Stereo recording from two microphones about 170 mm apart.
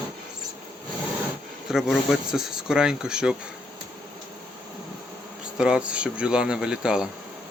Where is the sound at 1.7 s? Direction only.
5° right (ahead or behind).